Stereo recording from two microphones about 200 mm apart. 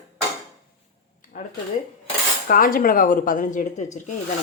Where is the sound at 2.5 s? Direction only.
45° left (ahead or behind).